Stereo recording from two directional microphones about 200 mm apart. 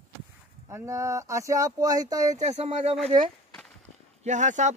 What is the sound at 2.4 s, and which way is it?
Speech, 35° right (ahead or behind).